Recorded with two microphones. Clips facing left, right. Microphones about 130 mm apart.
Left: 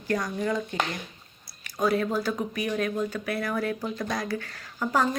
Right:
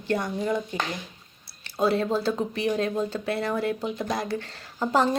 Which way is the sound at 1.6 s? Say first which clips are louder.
Right 1 dB; 30° right (ahead or behind).